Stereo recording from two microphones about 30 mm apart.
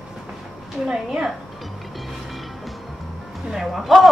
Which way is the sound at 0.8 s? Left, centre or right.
Centre.